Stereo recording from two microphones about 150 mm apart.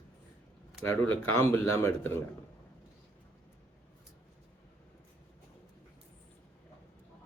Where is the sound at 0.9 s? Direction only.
15° left (ahead or behind).